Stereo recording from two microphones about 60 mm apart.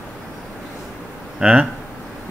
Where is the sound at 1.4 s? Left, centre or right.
Centre.